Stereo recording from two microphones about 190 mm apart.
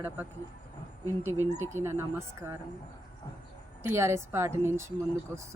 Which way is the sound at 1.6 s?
15° right (ahead or behind).